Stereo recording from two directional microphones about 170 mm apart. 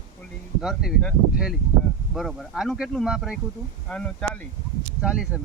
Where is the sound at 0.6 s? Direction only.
5° right (ahead or behind).